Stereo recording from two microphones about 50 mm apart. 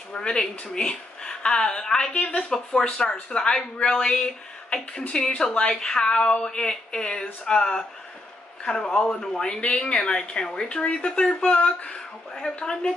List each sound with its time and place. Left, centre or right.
0.1 s speech: centre
11.9 s speech: centre